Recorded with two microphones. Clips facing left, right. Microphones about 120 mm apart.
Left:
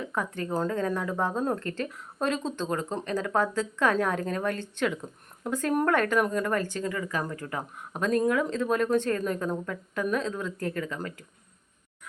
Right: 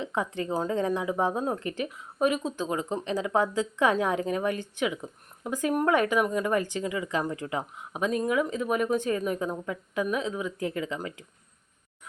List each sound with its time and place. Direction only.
0.0 s speech: 20° right (ahead or behind)